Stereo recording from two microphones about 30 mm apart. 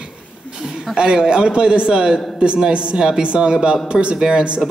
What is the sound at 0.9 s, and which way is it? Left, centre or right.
A man's voice, right.